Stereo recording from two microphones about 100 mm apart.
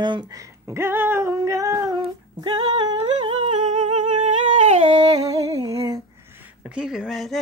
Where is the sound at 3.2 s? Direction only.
90° right.